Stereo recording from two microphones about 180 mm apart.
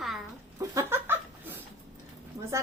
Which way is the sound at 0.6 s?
15° right (ahead or behind).